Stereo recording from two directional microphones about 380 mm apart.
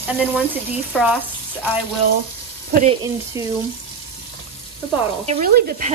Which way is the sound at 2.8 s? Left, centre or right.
Centre.